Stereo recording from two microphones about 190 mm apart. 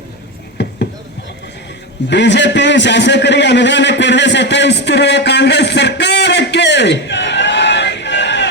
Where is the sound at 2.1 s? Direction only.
65° left (ahead or behind).